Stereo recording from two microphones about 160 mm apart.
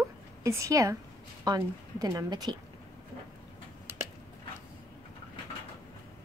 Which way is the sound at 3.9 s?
15° right (ahead or behind).